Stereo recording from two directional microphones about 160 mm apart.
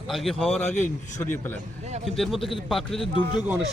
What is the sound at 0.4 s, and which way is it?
Speech, 40° left (ahead or behind).